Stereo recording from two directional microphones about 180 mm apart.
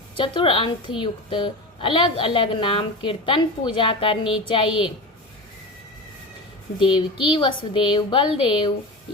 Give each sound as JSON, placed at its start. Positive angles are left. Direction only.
{"t": 0.2, "sound": "a woman's voice", "side_deg": 30}
{"t": 6.7, "sound": "a woman's voice", "side_deg": 30}